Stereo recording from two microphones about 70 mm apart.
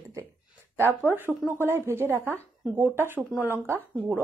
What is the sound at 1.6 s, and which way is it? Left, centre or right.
Speech, right.